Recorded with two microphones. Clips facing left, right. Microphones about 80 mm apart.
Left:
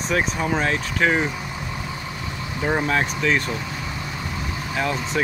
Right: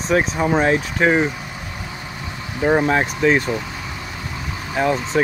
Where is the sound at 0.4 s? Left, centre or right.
Centre.